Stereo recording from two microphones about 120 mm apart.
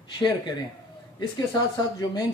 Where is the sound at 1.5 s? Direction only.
30° left (ahead or behind).